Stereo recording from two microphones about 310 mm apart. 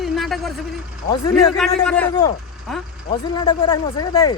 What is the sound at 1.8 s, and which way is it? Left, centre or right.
Speech, centre.